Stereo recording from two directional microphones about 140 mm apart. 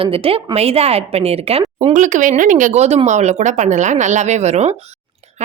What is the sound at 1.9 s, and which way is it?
A woman's voice, 65° right (ahead or behind).